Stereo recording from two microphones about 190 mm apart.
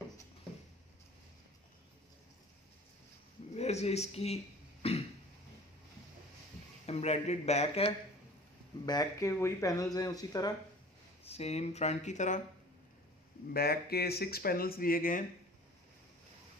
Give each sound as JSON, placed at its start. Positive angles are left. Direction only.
{"t": 3.5, "sound": "speech", "side_deg": 35}
{"t": 4.8, "sound": "cough", "side_deg": 30}
{"t": 6.9, "sound": "speech", "side_deg": 35}
{"t": 8.8, "sound": "speech", "side_deg": 20}
{"t": 11.2, "sound": "speech", "side_deg": 35}
{"t": 13.5, "sound": "speech", "side_deg": 55}